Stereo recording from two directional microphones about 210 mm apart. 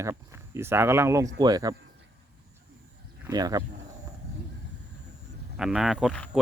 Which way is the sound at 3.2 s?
20° right (ahead or behind).